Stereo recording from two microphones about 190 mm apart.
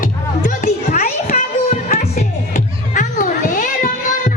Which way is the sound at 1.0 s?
50° left (ahead or behind).